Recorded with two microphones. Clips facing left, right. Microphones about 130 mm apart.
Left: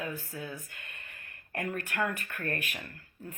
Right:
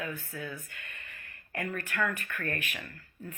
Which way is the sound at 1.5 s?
50° left (ahead or behind).